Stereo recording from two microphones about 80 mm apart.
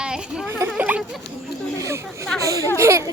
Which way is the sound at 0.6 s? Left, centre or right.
Centre.